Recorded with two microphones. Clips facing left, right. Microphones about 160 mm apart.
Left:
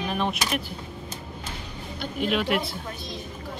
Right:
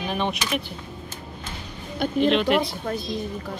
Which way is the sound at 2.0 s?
50° right (ahead or behind).